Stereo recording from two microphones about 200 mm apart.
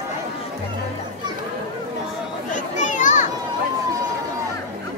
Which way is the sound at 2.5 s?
40° left (ahead or behind).